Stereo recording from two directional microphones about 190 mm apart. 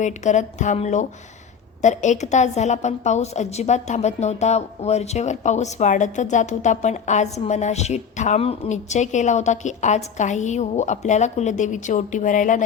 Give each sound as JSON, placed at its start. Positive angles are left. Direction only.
{"t": 0.0, "sound": "a woman's voice", "side_deg": 40}